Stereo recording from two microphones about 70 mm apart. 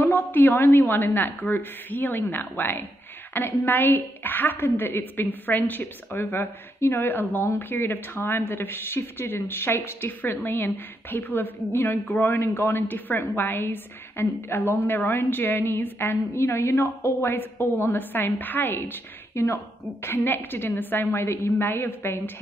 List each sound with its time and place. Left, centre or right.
0.0 s a woman's voice: left